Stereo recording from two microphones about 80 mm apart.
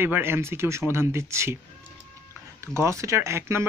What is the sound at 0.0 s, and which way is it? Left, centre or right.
Speech, right.